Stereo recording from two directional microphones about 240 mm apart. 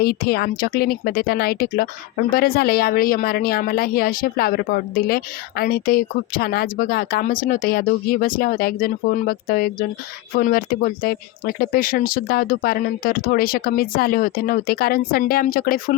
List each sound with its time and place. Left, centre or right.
0.0 s speech: left